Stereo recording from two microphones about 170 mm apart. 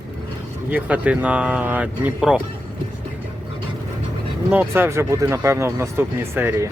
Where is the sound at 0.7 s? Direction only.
10° right (ahead or behind).